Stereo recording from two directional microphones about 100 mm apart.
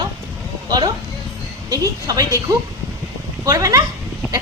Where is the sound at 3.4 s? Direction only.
35° right (ahead or behind).